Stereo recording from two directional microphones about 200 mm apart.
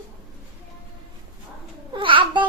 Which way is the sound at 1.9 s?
25° right (ahead or behind).